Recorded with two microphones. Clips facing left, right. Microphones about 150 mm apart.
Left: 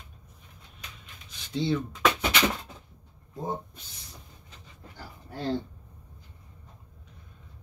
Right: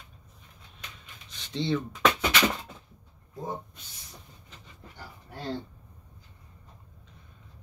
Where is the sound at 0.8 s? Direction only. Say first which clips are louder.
Right 1 dB; 5° left (ahead or behind).